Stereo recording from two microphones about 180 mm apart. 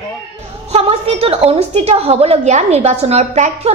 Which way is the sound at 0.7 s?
35° right (ahead or behind).